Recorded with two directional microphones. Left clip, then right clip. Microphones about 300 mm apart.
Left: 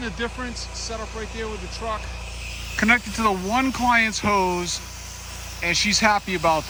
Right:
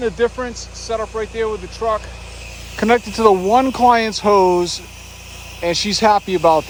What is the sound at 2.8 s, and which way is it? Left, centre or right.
Speech, centre.